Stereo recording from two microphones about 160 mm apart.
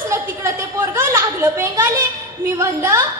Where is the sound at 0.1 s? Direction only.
15° right (ahead or behind).